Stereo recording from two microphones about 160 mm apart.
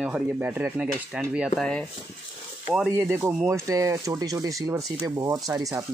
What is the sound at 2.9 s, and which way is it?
Speech, 15° right (ahead or behind).